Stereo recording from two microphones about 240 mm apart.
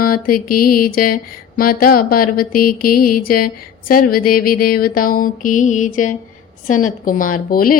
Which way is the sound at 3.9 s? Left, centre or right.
Left.